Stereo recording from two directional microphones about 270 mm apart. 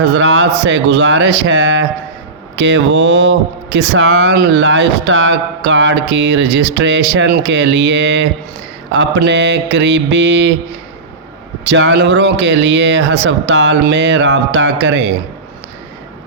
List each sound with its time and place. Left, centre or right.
0.1 s speech: right
11.6 s speech: right